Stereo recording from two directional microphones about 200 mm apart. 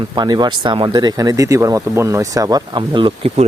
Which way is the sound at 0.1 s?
20° right (ahead or behind).